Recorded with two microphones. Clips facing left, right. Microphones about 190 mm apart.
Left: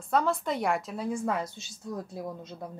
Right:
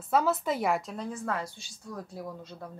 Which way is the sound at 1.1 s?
15° left (ahead or behind).